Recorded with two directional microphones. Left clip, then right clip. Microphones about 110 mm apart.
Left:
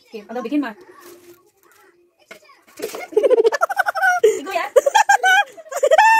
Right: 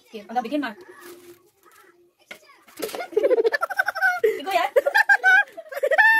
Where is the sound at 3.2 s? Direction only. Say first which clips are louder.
Left 5 dB; 20° left (ahead or behind).